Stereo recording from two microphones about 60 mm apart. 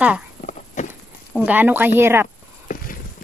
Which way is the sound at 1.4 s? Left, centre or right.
Right.